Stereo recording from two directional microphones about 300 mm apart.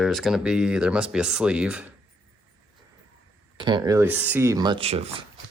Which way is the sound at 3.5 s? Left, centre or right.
Centre.